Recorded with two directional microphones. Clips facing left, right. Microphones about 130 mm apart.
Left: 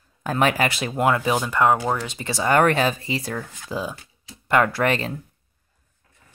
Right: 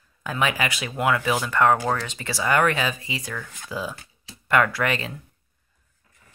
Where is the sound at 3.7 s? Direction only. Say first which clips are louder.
Left 2 dB; 20° left (ahead or behind); by 5.1 s 35° left (ahead or behind).